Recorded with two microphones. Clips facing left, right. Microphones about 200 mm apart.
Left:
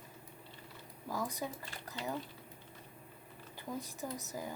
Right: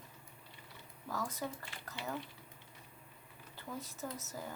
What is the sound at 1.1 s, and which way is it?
A woman's voice, 15° left (ahead or behind).